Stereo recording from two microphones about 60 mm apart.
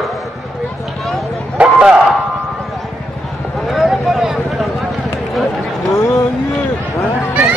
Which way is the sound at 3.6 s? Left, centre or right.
Centre.